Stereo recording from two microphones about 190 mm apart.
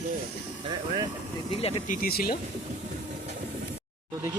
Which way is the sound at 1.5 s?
30° left (ahead or behind).